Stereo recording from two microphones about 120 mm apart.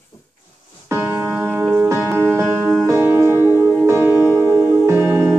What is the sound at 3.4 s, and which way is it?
Music, 20° left (ahead or behind).